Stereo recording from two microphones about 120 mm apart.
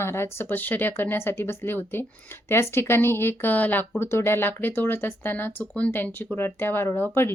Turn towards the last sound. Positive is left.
turn(degrees=20)  # may be behind; listen again after turning